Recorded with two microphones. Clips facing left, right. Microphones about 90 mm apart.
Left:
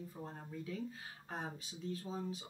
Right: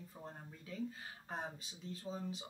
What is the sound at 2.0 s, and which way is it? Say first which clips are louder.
Speech: left 1 dB; centre (ahead or behind).